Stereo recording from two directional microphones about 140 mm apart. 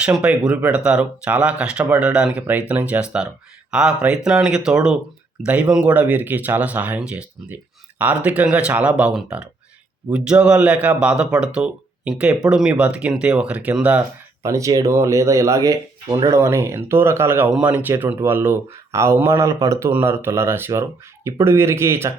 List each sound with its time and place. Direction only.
0.0 s a man's voice: 5° right (ahead or behind)
14.4 s a man's voice: 20° right (ahead or behind)